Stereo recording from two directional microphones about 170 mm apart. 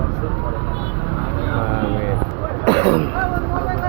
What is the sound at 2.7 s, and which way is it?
Speech, 30° right (ahead or behind).